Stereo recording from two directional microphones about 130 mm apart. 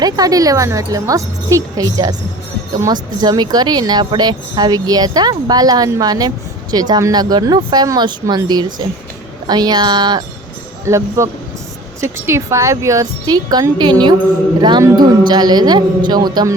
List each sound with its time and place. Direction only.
0.0 s speech: 30° right (ahead or behind)
10.8 s speech: 20° right (ahead or behind)